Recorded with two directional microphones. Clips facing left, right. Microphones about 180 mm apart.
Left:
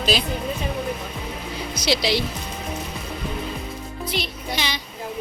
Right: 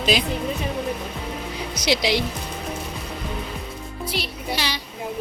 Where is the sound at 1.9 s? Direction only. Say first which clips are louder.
Right 1 dB; 15° right (ahead or behind).